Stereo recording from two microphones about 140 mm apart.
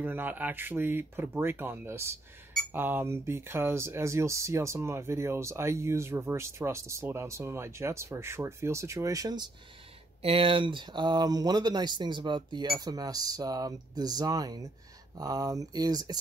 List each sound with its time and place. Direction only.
0.0 s speech: 15° right (ahead or behind)
10.2 s speech: 40° right (ahead or behind)